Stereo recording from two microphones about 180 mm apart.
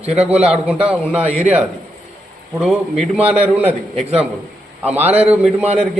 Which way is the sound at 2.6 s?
Centre (ahead or behind).